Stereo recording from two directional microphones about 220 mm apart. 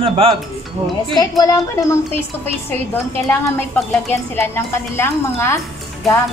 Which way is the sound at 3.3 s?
10° left (ahead or behind).